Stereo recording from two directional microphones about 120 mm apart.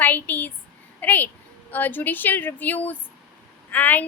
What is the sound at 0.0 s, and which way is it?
A woman's voice, 15° left (ahead or behind).